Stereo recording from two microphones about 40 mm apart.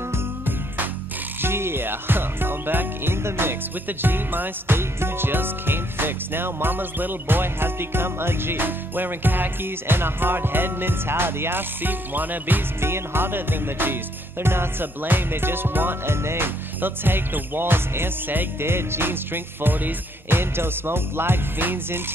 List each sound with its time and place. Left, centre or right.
1.4 s music: right
3.8 s music: right
4.7 s music: right
11.8 s music: right
12.8 s music: right
14.4 s music: right
18.6 s music: right